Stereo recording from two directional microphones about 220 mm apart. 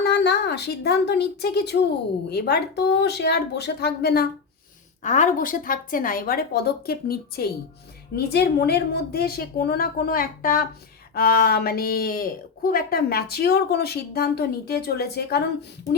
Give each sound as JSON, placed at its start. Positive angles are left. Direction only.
{"t": 0.0, "sound": "a woman's voice", "side_deg": 50}
{"t": 5.0, "sound": "speech", "side_deg": 35}